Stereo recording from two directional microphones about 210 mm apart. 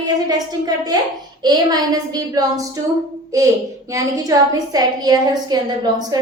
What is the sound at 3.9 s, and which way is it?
A woman's voice, 15° right (ahead or behind).